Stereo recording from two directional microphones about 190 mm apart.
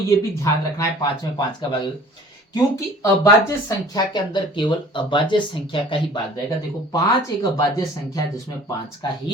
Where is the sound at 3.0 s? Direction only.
15° left (ahead or behind).